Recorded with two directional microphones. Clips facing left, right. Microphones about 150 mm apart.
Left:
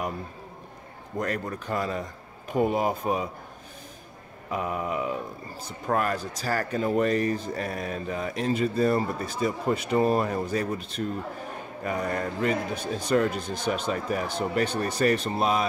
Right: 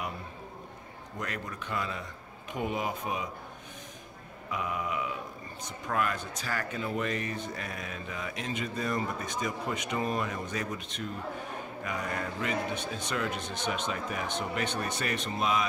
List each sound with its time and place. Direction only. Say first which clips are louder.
1.1 s speech: left 8 dB; 35° left (ahead or behind)
4.5 s speech: left 5 dB; 40° left (ahead or behind)